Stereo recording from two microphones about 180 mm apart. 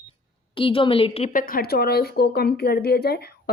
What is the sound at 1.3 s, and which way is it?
A woman's voice, 50° left (ahead or behind).